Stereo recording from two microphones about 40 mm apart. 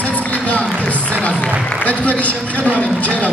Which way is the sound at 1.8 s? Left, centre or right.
Left.